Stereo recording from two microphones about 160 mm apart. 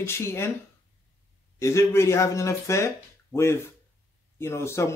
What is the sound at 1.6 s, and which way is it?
Speech, 15° left (ahead or behind).